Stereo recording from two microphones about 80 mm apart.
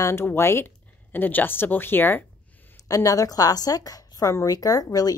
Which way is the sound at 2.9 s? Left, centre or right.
Left.